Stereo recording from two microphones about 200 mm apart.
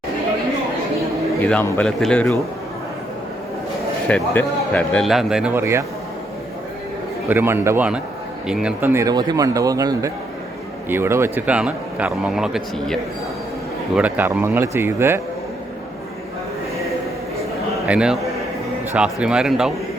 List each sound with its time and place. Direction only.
1.4 s speech: 10° left (ahead or behind)
4.1 s speech: 5° left (ahead or behind); by 5.8 s 10° right (ahead or behind)
7.3 s a man's voice: 10° right (ahead or behind)
17.8 s speech: 5° right (ahead or behind)